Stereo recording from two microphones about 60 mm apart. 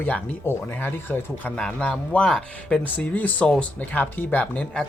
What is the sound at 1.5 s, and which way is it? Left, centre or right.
Speech, centre.